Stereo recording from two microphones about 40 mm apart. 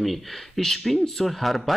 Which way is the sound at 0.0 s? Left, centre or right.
Centre.